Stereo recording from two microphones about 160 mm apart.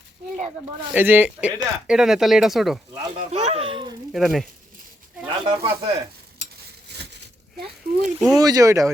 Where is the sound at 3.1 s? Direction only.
40° right (ahead or behind).